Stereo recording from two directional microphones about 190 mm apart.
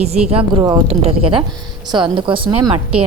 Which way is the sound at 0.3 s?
30° right (ahead or behind).